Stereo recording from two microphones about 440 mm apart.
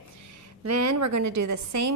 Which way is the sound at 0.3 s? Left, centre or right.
Right.